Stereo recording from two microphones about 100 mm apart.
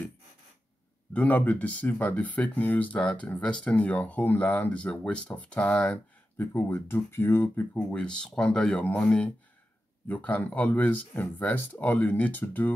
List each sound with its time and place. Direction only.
1.1 s speech: 15° left (ahead or behind)
6.4 s speech: 20° left (ahead or behind)